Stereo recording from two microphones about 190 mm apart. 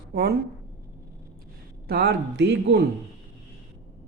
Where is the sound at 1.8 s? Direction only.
60° right (ahead or behind).